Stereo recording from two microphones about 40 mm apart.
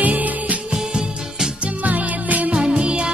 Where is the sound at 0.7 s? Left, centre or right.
Centre.